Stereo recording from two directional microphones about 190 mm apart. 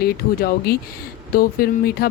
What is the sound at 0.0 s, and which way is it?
Speech, 55° left (ahead or behind).